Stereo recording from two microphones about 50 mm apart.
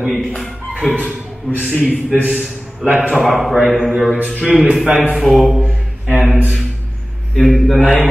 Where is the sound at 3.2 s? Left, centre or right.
Centre.